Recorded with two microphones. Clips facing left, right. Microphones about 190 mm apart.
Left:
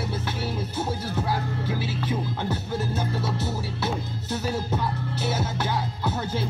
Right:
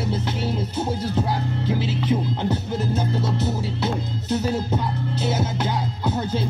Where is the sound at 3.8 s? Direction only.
20° right (ahead or behind).